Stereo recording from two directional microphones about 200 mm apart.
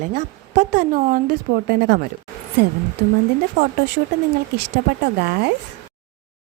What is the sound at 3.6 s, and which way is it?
Speech, 60° right (ahead or behind).